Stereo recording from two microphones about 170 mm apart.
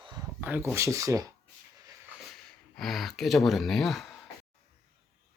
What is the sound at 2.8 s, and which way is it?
Speech, centre (ahead or behind).